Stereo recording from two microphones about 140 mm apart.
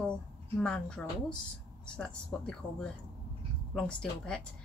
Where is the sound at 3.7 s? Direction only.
5° left (ahead or behind).